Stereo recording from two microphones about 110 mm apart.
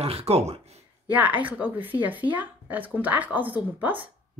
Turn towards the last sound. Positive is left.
turn(degrees=-15)  # may be behind; listen again after turning